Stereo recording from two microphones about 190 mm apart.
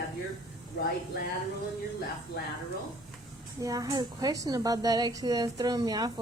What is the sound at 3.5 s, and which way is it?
A woman's voice, 20° right (ahead or behind).